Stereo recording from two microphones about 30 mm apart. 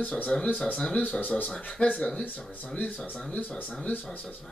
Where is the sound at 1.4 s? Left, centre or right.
Left.